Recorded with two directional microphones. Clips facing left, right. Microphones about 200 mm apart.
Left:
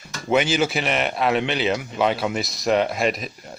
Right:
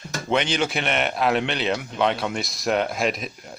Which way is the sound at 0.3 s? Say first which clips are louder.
Left 3 dB; 5° left (ahead or behind).